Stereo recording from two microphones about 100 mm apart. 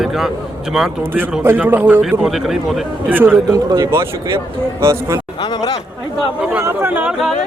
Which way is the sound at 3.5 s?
40° right (ahead or behind).